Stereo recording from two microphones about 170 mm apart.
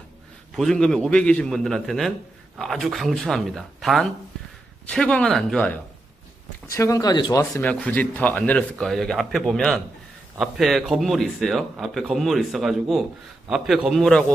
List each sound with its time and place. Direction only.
0.6 s a man's voice: 5° left (ahead or behind)
6.7 s speech: 20° left (ahead or behind)
7.6 s a man's voice: 10° left (ahead or behind)